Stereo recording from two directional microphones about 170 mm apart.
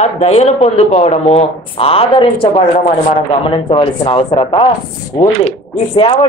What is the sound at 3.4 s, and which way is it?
Speech, 30° left (ahead or behind).